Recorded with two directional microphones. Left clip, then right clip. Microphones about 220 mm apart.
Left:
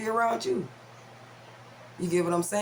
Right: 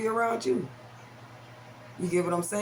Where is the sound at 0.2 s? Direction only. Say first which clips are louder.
Left 4 dB; 30° left (ahead or behind).